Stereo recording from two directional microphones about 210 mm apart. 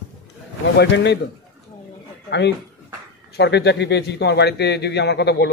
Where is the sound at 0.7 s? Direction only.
55° left (ahead or behind).